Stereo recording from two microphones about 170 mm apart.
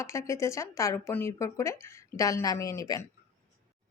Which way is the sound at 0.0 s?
15° left (ahead or behind).